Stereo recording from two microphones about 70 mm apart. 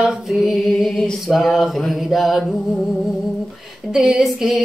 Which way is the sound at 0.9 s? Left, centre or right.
Centre.